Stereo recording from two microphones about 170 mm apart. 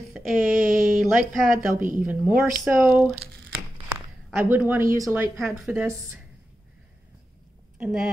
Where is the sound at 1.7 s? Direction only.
50° right (ahead or behind).